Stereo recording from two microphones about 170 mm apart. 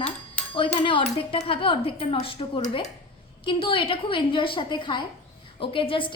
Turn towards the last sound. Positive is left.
turn(degrees=30)  # may be behind; listen again after turning